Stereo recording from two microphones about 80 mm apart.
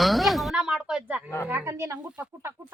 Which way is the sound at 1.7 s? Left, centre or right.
Right.